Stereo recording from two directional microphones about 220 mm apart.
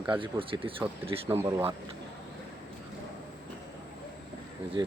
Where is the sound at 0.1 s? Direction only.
20° right (ahead or behind).